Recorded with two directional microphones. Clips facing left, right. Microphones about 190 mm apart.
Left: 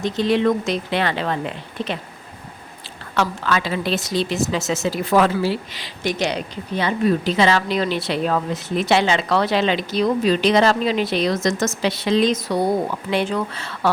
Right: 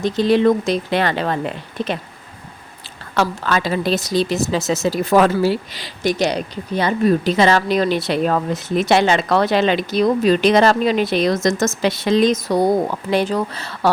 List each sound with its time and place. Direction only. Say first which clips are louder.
0.0 s speech: right 4 dB; 35° right (ahead or behind)
3.2 s a woman's voice: right 2 dB; 40° right (ahead or behind)